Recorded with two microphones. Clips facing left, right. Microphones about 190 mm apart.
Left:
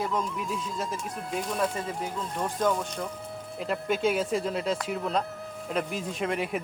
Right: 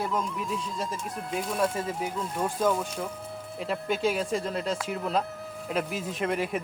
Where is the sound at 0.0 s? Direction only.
Centre (ahead or behind).